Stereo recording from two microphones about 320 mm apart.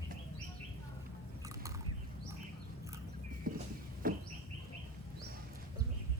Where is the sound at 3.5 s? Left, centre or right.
Right.